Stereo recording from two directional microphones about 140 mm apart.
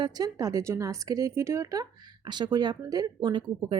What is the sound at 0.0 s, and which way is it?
Speech, 30° right (ahead or behind).